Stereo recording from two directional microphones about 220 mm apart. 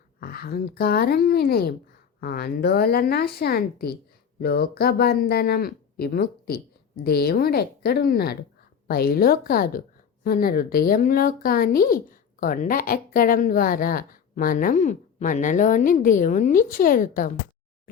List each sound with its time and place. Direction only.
0.2 s speech: 45° left (ahead or behind)